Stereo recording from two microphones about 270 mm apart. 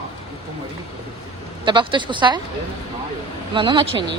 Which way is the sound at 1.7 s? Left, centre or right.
Centre.